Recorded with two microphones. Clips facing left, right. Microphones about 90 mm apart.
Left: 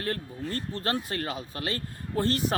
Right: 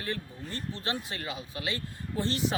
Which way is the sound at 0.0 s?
50° left (ahead or behind).